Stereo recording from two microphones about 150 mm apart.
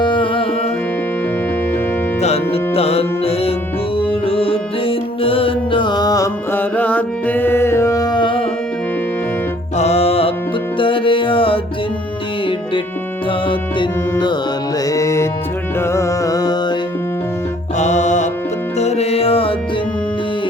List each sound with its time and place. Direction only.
0.0 s music: 35° left (ahead or behind)
2.2 s music: 40° left (ahead or behind)
9.7 s music: 45° left (ahead or behind)
13.5 s music: 30° left (ahead or behind)
14.8 s music: 20° left (ahead or behind)
17.7 s music: 50° left (ahead or behind)